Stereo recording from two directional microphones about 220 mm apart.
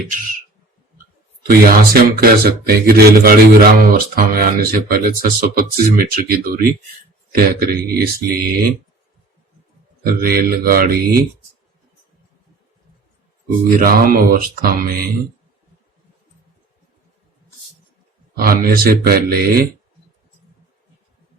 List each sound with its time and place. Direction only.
1.5 s speech: 45° right (ahead or behind)
10.0 s speech: 40° right (ahead or behind)
13.7 s speech: 40° right (ahead or behind)
18.3 s speech: 40° right (ahead or behind)